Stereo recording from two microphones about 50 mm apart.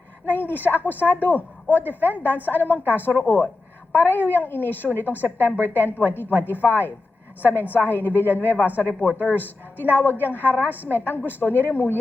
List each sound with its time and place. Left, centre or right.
0.3 s a woman's voice: left
9.0 s speech: right
9.3 s a woman's voice: left